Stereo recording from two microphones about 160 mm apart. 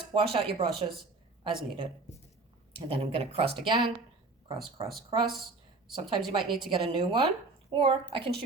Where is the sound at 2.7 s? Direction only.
35° right (ahead or behind).